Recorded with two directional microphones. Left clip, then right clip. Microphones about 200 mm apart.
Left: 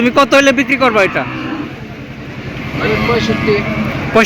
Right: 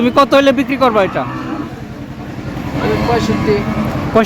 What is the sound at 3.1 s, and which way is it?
Speech, 15° right (ahead or behind).